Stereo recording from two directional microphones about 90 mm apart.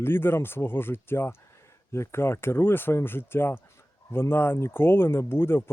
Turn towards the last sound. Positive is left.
turn(degrees=25)  # may be behind; listen again after turning